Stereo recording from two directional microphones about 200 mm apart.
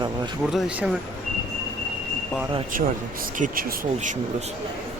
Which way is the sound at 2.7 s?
45° right (ahead or behind).